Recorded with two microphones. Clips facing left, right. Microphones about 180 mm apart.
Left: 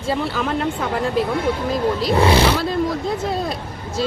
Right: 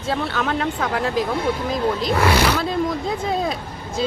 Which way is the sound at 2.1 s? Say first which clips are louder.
Left 4 dB; 30° left (ahead or behind).